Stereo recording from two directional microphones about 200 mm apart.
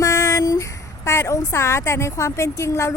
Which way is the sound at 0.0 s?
15° left (ahead or behind).